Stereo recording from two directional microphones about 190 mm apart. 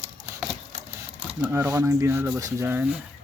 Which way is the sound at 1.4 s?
15° right (ahead or behind).